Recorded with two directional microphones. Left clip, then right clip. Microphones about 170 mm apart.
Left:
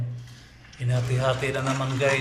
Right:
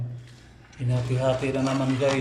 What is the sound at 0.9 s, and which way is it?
Speech, 20° right (ahead or behind).